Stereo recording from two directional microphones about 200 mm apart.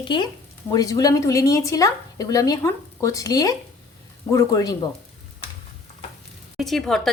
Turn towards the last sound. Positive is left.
turn(degrees=0)  # may be behind; listen again after turning